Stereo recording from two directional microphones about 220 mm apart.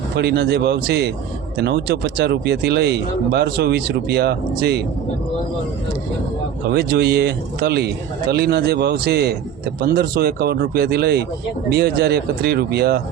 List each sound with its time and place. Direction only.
0.2 s speech: 50° right (ahead or behind)
6.7 s speech: 50° right (ahead or behind)